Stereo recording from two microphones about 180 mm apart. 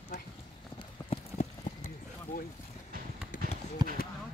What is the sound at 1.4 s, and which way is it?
Clip-clop, 40° left (ahead or behind).